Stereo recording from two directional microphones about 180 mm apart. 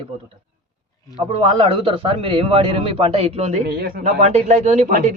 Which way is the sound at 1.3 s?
30° right (ahead or behind).